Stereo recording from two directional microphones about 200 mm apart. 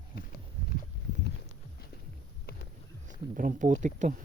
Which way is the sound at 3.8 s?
40° right (ahead or behind).